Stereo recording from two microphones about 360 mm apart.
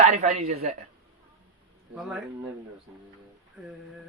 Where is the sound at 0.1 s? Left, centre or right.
Centre.